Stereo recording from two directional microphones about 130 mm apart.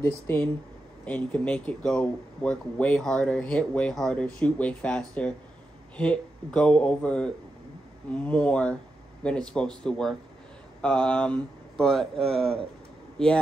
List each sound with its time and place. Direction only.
0.3 s speech: 20° left (ahead or behind); by 12.5 s 5° left (ahead or behind)